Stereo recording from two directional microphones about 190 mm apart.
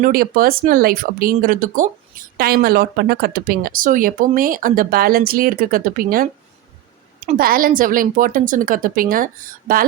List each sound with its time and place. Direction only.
0.0 s speech: 50° right (ahead or behind)
7.3 s speech: 50° right (ahead or behind)